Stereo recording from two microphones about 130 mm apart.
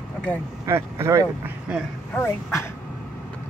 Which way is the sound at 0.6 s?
20° right (ahead or behind).